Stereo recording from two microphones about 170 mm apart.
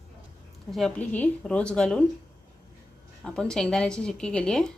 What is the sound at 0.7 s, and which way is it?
Speech, 5° left (ahead or behind).